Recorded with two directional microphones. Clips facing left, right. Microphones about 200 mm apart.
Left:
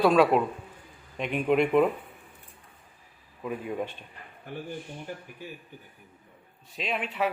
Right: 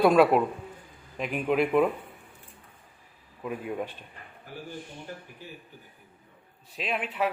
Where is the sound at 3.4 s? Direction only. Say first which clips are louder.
Left 1 dB; centre (ahead or behind).